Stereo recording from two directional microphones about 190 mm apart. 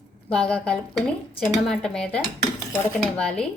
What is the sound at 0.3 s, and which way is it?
Dishes, 5° left (ahead or behind).